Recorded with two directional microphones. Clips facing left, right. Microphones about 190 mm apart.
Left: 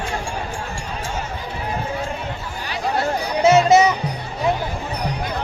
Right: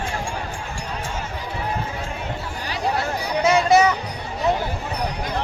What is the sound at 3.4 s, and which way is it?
Music, 25° left (ahead or behind).